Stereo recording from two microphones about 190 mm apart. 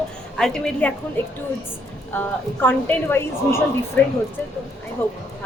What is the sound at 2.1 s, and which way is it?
A woman's voice, 10° left (ahead or behind).